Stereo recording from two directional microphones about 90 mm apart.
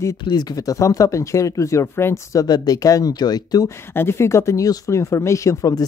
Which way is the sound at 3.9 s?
30° left (ahead or behind).